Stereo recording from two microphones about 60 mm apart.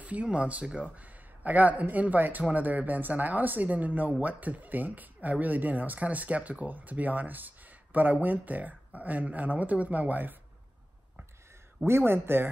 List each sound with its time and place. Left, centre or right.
0.0 s speech: right
11.8 s speech: right